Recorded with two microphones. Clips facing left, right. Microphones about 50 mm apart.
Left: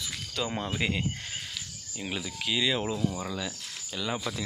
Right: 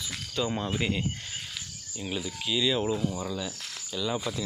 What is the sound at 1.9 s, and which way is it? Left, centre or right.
Speech, left.